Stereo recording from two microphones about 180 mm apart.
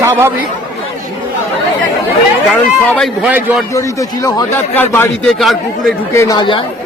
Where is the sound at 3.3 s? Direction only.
10° right (ahead or behind).